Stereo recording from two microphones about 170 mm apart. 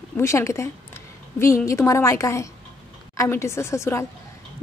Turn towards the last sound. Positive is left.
turn(degrees=15)  # may be behind; listen again after turning